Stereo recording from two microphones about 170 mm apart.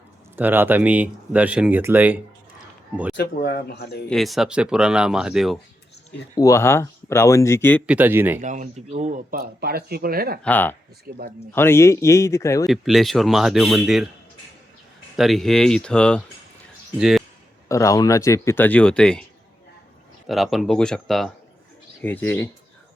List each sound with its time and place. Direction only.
0.3 s speech: 10° right (ahead or behind)
3.2 s speech: 60° left (ahead or behind)
4.1 s speech: centre (ahead or behind)
6.3 s speech: 20° left (ahead or behind)
7.9 s speech: 10° right (ahead or behind)
8.4 s speech: 50° right (ahead or behind)
9.3 s speech: 65° right (ahead or behind)
10.4 s speech: 10° left (ahead or behind)
11.1 s speech: 65° right (ahead or behind)
11.5 s speech: 15° left (ahead or behind)
12.6 s speech: centre (ahead or behind)
15.1 s speech: centre (ahead or behind)
17.7 s speech: 20° left (ahead or behind)
20.2 s speech: centre (ahead or behind)